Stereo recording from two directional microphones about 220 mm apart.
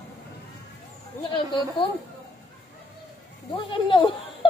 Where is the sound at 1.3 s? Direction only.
25° left (ahead or behind).